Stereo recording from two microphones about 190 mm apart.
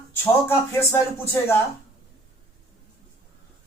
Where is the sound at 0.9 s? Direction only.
15° left (ahead or behind).